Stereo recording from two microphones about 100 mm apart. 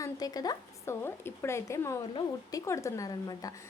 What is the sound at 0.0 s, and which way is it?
Speech, 40° left (ahead or behind).